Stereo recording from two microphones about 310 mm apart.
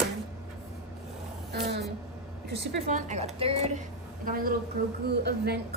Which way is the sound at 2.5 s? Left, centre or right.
Right.